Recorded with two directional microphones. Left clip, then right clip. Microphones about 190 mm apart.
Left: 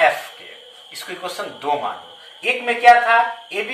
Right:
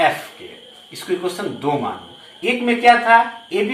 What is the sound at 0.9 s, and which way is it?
A man's voice, 30° left (ahead or behind).